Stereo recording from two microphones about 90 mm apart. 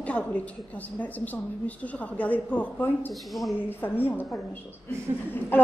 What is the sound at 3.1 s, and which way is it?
Speech, centre (ahead or behind).